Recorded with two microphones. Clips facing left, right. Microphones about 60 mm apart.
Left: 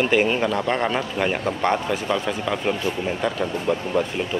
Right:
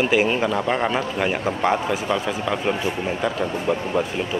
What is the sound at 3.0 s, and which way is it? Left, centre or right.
Speech, centre.